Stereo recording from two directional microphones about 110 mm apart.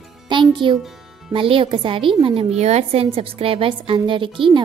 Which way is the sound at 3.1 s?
60° right (ahead or behind).